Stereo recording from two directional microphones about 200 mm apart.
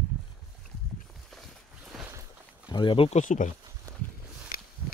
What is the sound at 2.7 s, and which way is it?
Speech, 25° left (ahead or behind).